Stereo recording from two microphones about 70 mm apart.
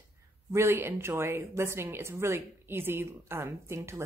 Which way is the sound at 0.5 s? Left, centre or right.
Right.